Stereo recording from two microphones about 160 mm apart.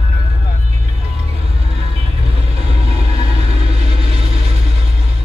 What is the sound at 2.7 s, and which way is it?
Vehicle, 40° right (ahead or behind).